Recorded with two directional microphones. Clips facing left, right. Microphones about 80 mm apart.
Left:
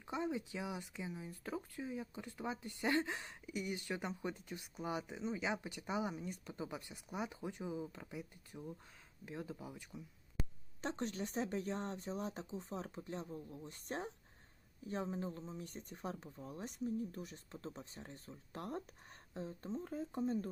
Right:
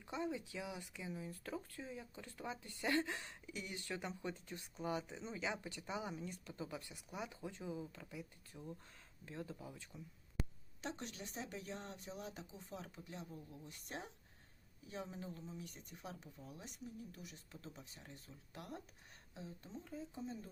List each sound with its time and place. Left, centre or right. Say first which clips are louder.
0.0 s speech: left 3 dB; left
10.8 s speech: left 7 dB; left